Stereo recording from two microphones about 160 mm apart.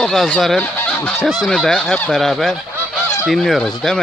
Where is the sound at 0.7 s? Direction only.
5° left (ahead or behind).